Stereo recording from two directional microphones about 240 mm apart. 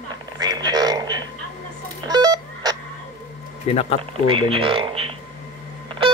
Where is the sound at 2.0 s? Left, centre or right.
Centre.